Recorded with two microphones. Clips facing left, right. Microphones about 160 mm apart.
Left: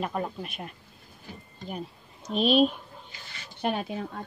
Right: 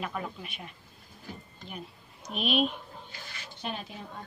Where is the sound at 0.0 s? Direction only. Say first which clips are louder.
Left 5 dB; 40° left (ahead or behind).